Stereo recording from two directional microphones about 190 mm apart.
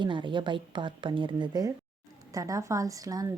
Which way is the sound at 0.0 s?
25° right (ahead or behind).